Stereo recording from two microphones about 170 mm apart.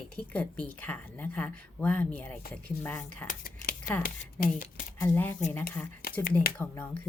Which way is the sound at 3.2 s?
55° left (ahead or behind).